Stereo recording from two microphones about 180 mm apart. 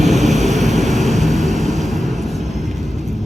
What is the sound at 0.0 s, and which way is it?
Vehicle, centre (ahead or behind).